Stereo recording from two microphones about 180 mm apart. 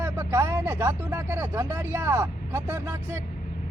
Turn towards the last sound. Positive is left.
turn(degrees=-15)  # may be behind; listen again after turning